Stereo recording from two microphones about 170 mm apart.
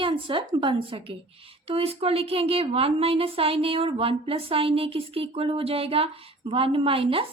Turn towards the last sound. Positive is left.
turn(degrees=-30)  # may be behind; listen again after turning